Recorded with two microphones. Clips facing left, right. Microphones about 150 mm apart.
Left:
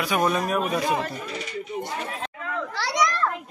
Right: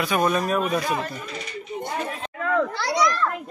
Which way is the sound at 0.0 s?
10° left (ahead or behind).